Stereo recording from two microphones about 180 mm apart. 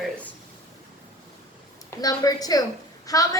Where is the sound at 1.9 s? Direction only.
20° left (ahead or behind).